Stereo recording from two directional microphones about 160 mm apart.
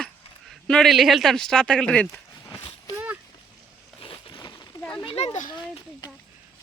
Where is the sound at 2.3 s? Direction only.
20° left (ahead or behind).